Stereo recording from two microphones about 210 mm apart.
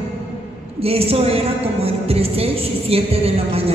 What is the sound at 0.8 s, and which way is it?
A woman's voice, 30° right (ahead or behind).